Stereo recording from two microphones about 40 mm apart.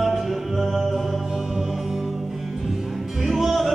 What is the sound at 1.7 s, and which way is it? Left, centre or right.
Music, centre.